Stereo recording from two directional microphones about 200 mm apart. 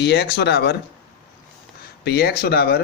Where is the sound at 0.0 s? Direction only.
55° left (ahead or behind).